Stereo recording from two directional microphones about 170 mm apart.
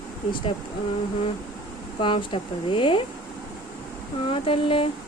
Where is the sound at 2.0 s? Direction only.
30° left (ahead or behind).